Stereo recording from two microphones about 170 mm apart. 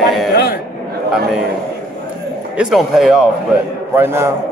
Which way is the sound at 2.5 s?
5° right (ahead or behind).